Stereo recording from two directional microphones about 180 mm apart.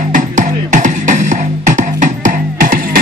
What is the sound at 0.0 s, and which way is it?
Music, 45° right (ahead or behind).